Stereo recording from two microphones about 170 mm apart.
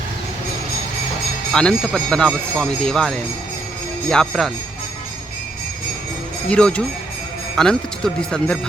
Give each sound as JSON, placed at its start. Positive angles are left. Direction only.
{"t": 1.5, "sound": "speech", "side_deg": 5}
{"t": 6.5, "sound": "speech", "side_deg": 5}